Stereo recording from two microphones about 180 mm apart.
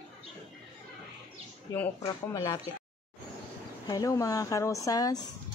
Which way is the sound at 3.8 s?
20° left (ahead or behind).